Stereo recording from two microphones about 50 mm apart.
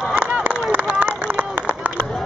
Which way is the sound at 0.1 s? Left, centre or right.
Right.